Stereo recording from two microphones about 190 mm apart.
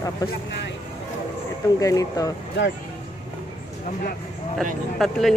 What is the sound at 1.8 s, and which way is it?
Speech, 20° left (ahead or behind).